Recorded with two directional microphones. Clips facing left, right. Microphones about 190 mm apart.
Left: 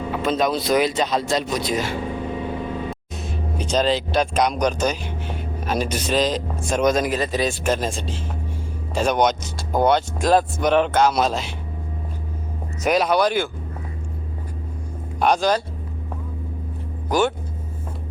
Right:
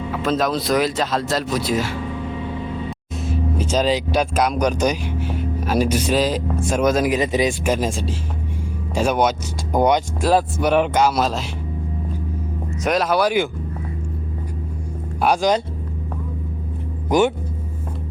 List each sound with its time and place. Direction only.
0.1 s speech: centre (ahead or behind)
3.2 s speech: 5° right (ahead or behind)
7.2 s a man's voice: 15° right (ahead or behind); by 11.4 s centre (ahead or behind)
12.8 s speech: centre (ahead or behind)
15.2 s a man's voice: 10° right (ahead or behind)
17.1 s a man's voice: 15° right (ahead or behind)